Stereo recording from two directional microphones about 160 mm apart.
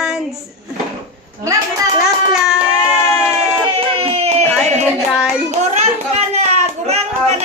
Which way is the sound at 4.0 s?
40° right (ahead or behind).